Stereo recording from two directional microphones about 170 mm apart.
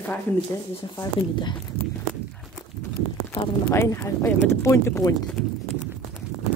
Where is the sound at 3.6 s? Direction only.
15° left (ahead or behind).